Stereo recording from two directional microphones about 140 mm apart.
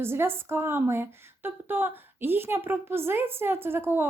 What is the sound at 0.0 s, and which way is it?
A woman's voice, 15° right (ahead or behind).